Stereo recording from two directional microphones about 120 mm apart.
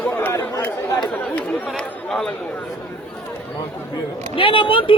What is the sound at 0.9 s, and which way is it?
Speech, 35° left (ahead or behind).